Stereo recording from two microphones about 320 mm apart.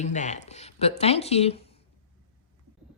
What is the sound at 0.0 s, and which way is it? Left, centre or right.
A woman's voice, left.